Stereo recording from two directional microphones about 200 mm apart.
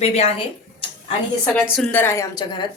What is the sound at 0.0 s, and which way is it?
Speech, 30° left (ahead or behind).